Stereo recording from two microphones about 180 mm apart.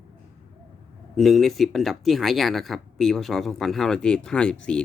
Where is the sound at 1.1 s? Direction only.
Centre (ahead or behind).